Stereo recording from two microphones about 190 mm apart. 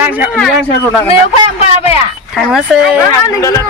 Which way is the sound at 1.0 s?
30° left (ahead or behind).